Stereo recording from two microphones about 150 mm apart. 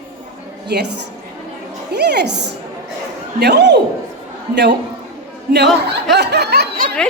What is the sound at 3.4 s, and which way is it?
Speech, 90° right.